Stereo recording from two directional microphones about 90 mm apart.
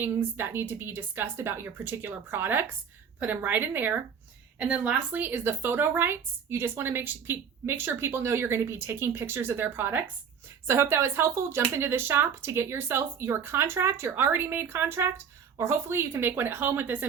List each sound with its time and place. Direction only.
0.0 s a woman's voice: 25° right (ahead or behind)